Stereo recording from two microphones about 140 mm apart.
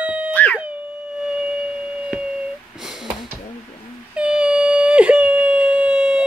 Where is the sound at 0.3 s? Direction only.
10° left (ahead or behind).